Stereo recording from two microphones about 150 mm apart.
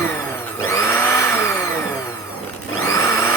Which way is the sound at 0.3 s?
15° left (ahead or behind).